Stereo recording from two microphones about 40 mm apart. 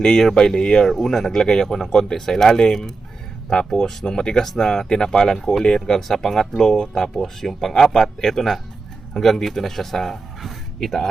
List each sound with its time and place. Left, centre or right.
0.0 s speech: centre
0.9 s speech: centre; by 6.0 s left
6.0 s speech: centre